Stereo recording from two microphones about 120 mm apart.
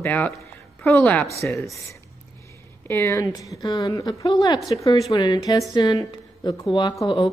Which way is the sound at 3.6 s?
30° left (ahead or behind).